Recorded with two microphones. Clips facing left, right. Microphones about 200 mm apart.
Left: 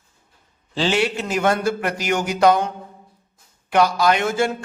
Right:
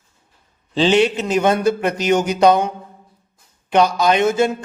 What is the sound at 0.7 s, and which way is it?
A man's voice, 20° right (ahead or behind).